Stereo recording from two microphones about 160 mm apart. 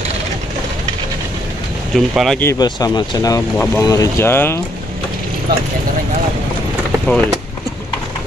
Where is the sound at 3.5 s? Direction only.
10° left (ahead or behind).